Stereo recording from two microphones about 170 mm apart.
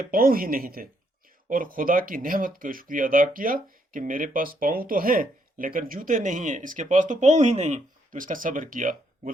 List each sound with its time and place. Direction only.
0.1 s speech: 55° right (ahead or behind)